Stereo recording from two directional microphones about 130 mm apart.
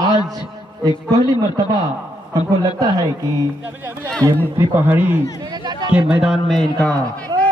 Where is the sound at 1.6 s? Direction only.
30° right (ahead or behind).